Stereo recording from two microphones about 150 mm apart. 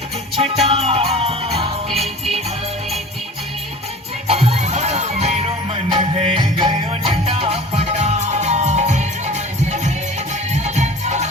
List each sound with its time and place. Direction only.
0.3 s music: 45° right (ahead or behind)
4.3 s music: 45° right (ahead or behind)